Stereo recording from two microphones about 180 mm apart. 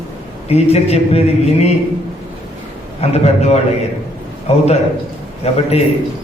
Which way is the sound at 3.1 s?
35° left (ahead or behind).